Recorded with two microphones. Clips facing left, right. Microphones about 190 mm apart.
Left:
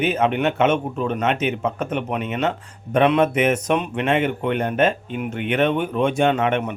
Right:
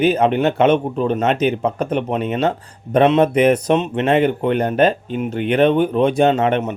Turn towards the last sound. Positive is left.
turn(degrees=-35)  # may be behind; listen again after turning